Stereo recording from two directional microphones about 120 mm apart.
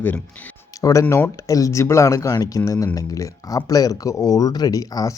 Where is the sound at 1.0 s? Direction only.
15° left (ahead or behind).